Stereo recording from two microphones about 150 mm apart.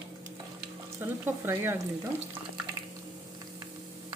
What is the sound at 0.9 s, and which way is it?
Speech, 15° right (ahead or behind).